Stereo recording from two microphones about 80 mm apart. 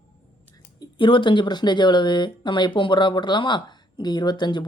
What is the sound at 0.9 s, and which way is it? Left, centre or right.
Speech, left.